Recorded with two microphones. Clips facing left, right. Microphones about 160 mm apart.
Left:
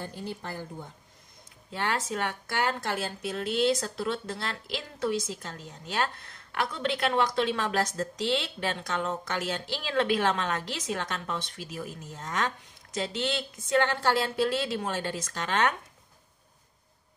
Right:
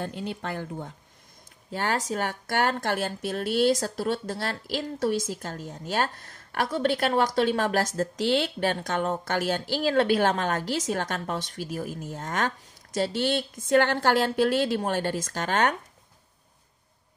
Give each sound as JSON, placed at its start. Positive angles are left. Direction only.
{"t": 0.0, "sound": "speech", "side_deg": -70}
{"t": 1.7, "sound": "a woman's voice", "side_deg": -40}
{"t": 3.6, "sound": "a woman's voice", "side_deg": -40}
{"t": 13.7, "sound": "a woman's voice", "side_deg": -60}